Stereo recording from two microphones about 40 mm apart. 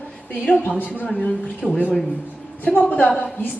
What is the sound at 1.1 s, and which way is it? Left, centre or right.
Speech, left.